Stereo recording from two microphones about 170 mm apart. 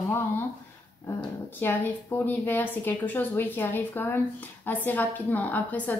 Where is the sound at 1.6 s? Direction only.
10° left (ahead or behind).